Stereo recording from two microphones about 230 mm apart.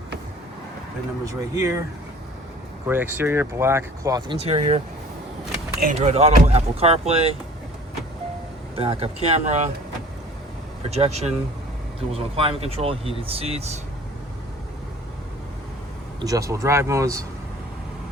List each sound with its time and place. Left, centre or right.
1.2 s speech: centre
2.8 s speech: centre
4.4 s speech: right
5.8 s speech: right
8.7 s speech: right
10.9 s speech: right
16.2 s speech: centre